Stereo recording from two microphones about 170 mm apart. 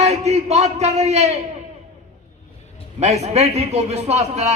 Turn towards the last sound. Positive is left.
turn(degrees=-40)  # may be behind; listen again after turning